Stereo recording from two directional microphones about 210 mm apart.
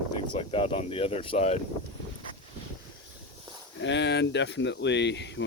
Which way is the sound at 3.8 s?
60° left (ahead or behind).